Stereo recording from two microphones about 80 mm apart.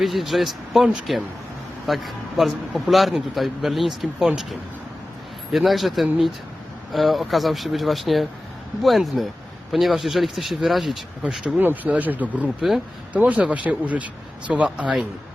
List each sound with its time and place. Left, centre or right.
0.0 s speech: centre
5.5 s speech: centre
11.2 s a man's voice: centre